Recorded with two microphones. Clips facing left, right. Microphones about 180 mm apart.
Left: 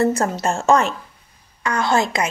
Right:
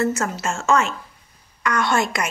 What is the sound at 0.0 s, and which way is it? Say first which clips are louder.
A woman's voice: left 4 dB; 35° left (ahead or behind).